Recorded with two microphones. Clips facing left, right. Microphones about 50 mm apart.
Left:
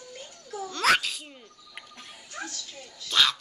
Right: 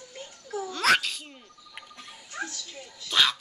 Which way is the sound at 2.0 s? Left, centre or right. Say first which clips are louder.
Even; centre.